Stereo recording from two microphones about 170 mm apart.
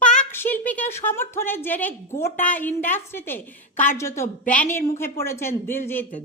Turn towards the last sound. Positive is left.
turn(degrees=10)  # may be behind; listen again after turning